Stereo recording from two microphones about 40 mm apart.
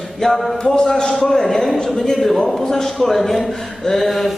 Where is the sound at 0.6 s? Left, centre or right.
Centre.